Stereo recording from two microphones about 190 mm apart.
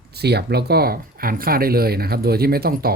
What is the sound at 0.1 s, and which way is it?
Speech, 60° right (ahead or behind).